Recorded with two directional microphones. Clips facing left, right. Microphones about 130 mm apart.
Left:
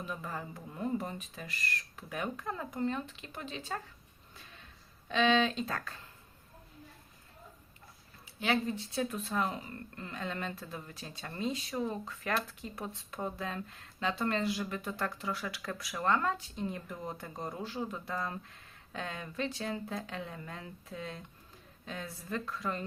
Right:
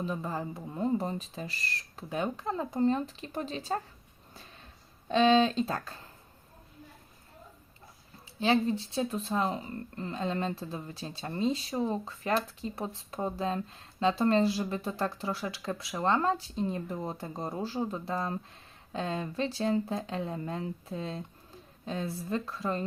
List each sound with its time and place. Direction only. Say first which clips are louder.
0.0 s speech: right 6 dB; 30° right (ahead or behind)
5.0 s speech: right 5 dB; 35° right (ahead or behind)
8.4 s speech: right 5 dB; 30° right (ahead or behind)